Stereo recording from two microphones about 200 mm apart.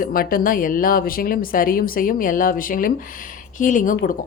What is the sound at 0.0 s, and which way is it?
A woman's voice, 45° left (ahead or behind).